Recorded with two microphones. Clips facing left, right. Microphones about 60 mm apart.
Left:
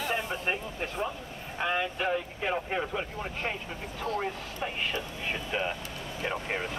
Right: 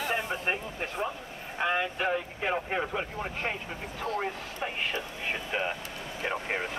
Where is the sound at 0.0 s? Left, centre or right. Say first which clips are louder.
Right 1 dB; right.